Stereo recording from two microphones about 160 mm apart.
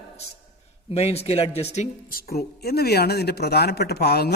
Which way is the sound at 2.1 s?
70° left (ahead or behind).